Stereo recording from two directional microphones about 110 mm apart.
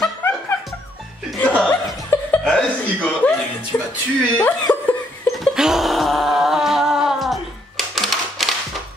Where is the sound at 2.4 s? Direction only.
10° left (ahead or behind).